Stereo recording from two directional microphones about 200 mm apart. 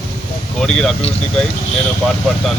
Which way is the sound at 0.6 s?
5° left (ahead or behind).